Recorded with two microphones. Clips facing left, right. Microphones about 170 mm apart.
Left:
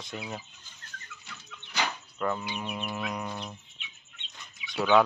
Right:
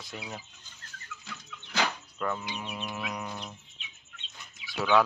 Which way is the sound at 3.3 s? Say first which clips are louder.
Left 2 dB; 5° left (ahead or behind).